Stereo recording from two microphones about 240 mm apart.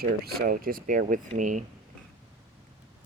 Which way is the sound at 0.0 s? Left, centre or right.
Right.